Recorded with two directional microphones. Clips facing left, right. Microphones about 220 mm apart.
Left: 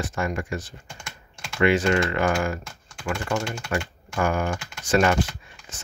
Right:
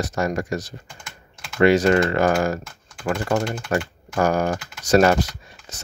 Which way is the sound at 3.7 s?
40° right (ahead or behind).